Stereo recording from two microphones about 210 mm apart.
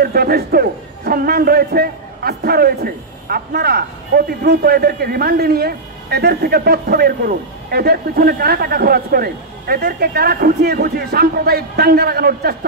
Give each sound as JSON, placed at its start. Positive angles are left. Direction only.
{"t": 0.0, "sound": "a man's voice", "side_deg": -45}